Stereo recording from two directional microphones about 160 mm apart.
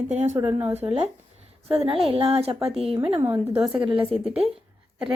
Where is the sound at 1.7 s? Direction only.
35° right (ahead or behind).